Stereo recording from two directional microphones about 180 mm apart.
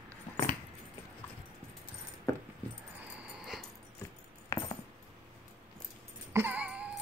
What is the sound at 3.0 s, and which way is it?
Dog, 5° right (ahead or behind).